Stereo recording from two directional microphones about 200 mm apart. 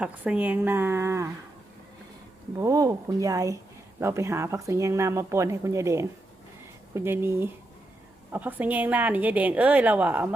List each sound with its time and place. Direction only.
0.0 s speech: 5° right (ahead or behind)
2.6 s speech: 15° right (ahead or behind)